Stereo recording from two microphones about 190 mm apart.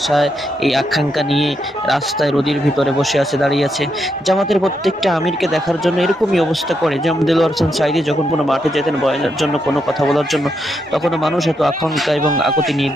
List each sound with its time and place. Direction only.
0.1 s speech: centre (ahead or behind)